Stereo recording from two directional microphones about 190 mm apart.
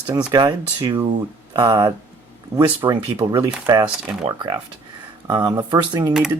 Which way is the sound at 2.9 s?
20° right (ahead or behind).